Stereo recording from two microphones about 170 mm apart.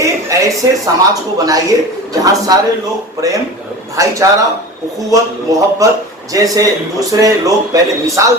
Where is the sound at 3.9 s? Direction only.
20° right (ahead or behind).